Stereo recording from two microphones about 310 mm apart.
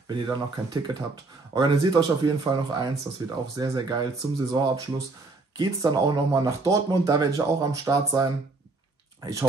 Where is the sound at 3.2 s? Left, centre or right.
Centre.